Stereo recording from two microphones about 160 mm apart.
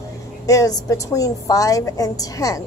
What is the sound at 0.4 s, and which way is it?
A woman's voice, 20° left (ahead or behind).